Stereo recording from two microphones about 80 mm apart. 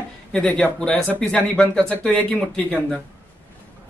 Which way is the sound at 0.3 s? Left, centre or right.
Centre.